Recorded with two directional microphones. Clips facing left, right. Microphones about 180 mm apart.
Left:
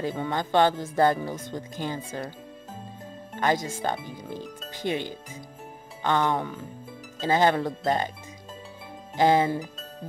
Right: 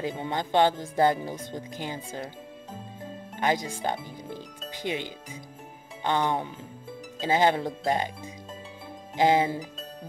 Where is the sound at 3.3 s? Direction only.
15° right (ahead or behind).